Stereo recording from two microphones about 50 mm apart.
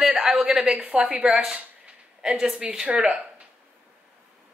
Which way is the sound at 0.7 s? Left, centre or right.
Right.